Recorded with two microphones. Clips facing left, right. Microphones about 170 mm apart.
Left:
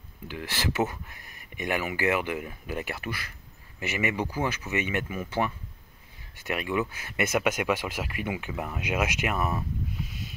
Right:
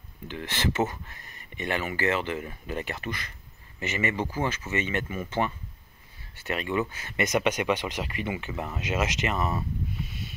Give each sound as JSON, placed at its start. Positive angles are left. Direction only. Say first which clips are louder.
{"t": 0.3, "sound": "speech", "louder": "right 2 dB", "side_deg": 5}